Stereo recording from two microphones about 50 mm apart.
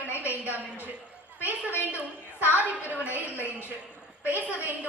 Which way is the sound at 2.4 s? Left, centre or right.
Left.